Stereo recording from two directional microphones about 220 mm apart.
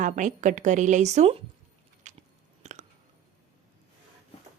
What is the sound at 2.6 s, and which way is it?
Chewing, 30° right (ahead or behind).